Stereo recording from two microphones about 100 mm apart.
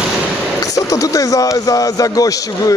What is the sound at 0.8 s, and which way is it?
A man's voice, 35° left (ahead or behind).